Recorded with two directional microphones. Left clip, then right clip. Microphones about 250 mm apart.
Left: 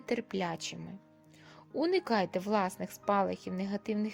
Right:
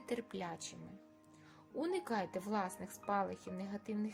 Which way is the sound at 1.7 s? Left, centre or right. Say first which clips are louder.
Left 9 dB; left.